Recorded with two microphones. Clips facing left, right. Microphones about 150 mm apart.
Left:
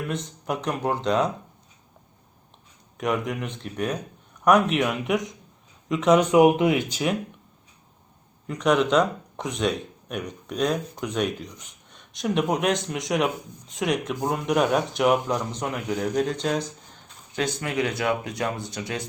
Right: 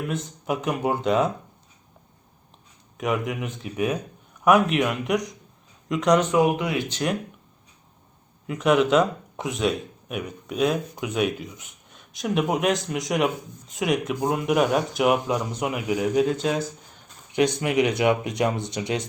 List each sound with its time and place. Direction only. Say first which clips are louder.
0.1 s speech: right 1 dB; centre (ahead or behind)
3.0 s speech: even; centre (ahead or behind)
6.1 s speech: left 7 dB; 20° left (ahead or behind)
6.8 s speech: even; 5° left (ahead or behind)
8.4 s speech: right 2 dB; 5° right (ahead or behind)
17.3 s speech: right 5 dB; 15° right (ahead or behind)